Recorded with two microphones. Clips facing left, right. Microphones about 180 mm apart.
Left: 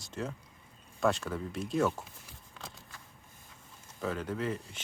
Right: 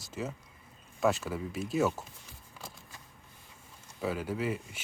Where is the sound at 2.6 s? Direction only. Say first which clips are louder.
Even; 5° right (ahead or behind).